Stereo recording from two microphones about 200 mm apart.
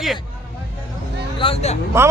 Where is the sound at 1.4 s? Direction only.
30° left (ahead or behind).